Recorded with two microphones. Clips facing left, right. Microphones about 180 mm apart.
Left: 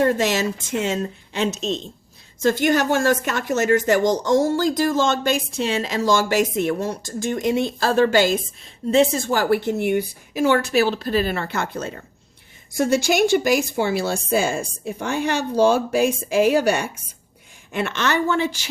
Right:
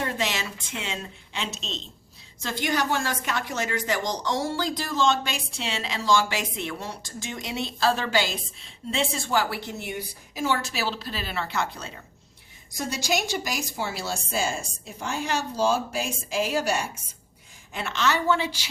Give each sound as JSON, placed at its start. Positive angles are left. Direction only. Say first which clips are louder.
{"t": 0.0, "sound": "a woman's voice", "louder": "left 10 dB", "side_deg": 45}